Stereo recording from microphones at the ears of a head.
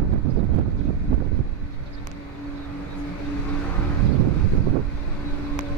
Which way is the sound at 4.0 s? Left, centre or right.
Right.